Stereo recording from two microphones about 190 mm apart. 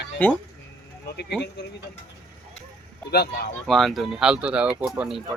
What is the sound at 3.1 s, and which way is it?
Speech, 60° left (ahead or behind).